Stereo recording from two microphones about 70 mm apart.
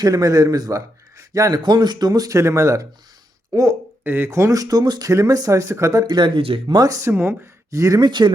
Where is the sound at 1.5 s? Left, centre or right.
Right.